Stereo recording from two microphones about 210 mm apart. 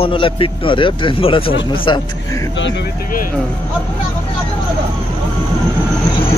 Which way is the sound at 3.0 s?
40° left (ahead or behind).